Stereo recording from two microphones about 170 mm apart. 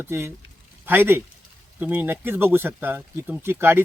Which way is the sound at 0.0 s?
15° right (ahead or behind).